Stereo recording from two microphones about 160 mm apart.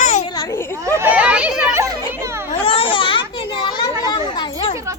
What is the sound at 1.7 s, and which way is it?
Children playing, 20° right (ahead or behind).